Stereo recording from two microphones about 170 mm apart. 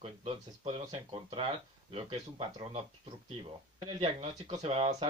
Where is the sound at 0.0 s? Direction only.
35° right (ahead or behind).